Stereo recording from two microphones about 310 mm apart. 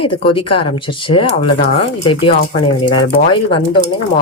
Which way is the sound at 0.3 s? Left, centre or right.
Centre.